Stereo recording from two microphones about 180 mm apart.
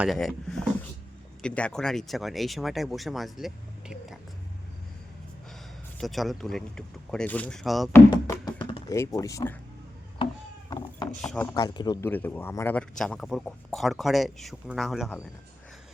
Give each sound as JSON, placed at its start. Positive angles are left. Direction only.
{"t": 0.0, "sound": "speech", "side_deg": 0}
{"t": 6.0, "sound": "speech", "side_deg": 0}
{"t": 7.9, "sound": "music", "side_deg": 15}
{"t": 9.0, "sound": "speech", "side_deg": 20}
{"t": 10.7, "sound": "a sound", "side_deg": 20}
{"t": 11.2, "sound": "speech", "side_deg": 5}
{"t": 11.5, "sound": "speech", "side_deg": 25}